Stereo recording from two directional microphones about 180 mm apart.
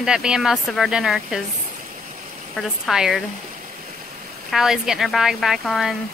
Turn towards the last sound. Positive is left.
turn(degrees=0)  # may be behind; listen again after turning